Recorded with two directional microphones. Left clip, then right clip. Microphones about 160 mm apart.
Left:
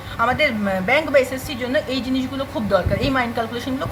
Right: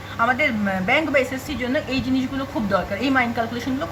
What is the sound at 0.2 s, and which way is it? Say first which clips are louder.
A woman's voice: left 1 dB; 30° left (ahead or behind).